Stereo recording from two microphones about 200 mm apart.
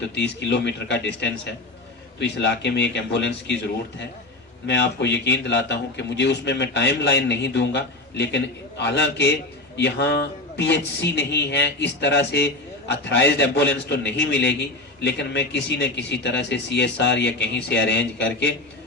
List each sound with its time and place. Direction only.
0.1 s a man's voice: 60° left (ahead or behind)
4.6 s a man's voice: 60° left (ahead or behind)